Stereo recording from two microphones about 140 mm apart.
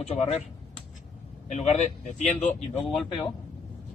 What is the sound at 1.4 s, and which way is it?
Speech, 55° left (ahead or behind).